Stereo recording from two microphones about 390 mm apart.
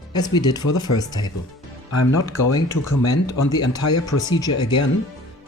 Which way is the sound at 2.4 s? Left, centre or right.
Left.